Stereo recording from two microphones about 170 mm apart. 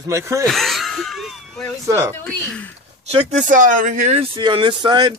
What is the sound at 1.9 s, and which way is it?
Speech, 15° right (ahead or behind).